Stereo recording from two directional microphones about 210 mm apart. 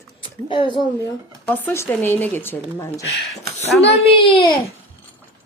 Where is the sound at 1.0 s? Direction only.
10° left (ahead or behind).